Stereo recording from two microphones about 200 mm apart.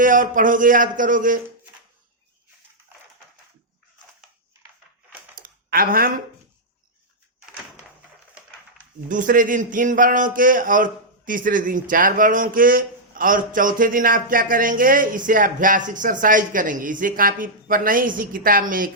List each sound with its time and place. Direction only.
0.0 s speech: 40° right (ahead or behind)
5.4 s a sound: 45° right (ahead or behind)
9.0 s speech: 40° right (ahead or behind)